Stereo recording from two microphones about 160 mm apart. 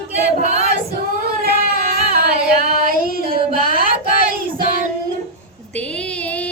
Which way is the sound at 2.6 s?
65° right (ahead or behind).